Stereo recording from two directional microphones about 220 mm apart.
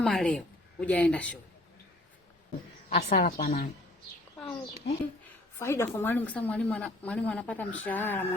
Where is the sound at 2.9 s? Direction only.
40° left (ahead or behind).